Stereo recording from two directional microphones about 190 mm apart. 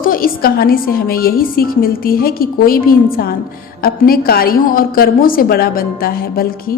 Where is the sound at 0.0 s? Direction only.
50° left (ahead or behind).